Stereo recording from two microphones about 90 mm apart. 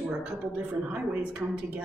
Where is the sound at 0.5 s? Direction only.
20° right (ahead or behind).